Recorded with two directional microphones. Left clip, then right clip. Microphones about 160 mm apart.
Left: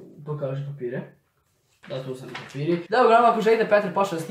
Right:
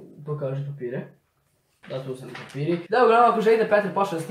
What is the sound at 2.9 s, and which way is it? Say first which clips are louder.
Speech: even; 15° left (ahead or behind).